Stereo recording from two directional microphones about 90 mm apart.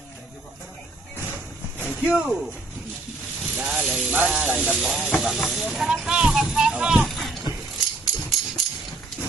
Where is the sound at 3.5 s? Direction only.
15° right (ahead or behind).